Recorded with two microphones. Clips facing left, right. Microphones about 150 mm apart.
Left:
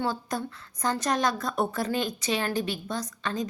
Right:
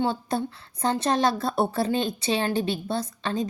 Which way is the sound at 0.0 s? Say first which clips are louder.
Right 4 dB; 30° right (ahead or behind).